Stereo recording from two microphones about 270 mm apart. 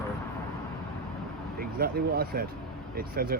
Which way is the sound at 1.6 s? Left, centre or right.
Right.